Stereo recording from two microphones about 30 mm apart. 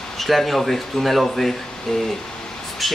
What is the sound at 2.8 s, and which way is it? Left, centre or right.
Speech, centre.